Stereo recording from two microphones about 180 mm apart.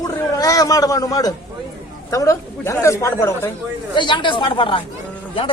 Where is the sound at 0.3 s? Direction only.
20° left (ahead or behind).